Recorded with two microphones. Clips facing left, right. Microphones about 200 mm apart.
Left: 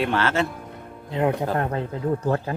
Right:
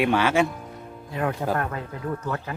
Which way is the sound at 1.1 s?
20° left (ahead or behind).